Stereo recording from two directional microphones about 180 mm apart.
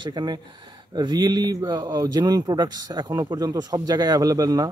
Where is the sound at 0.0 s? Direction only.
25° right (ahead or behind).